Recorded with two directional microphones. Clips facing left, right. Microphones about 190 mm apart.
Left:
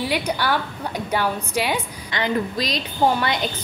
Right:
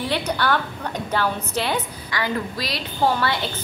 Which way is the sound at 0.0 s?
10° left (ahead or behind).